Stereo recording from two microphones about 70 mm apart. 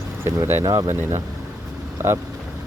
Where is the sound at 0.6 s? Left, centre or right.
Right.